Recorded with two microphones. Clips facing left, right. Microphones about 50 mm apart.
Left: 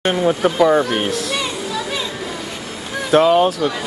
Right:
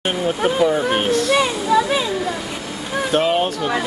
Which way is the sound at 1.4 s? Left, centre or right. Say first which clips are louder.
Right 7 dB; right.